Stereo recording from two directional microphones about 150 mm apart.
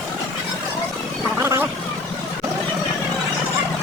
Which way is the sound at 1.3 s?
15° right (ahead or behind).